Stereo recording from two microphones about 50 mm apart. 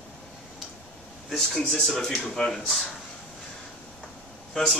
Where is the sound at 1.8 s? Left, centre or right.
Centre.